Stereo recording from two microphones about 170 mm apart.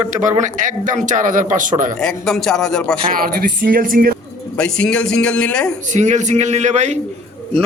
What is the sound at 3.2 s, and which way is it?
Speech, 60° right (ahead or behind).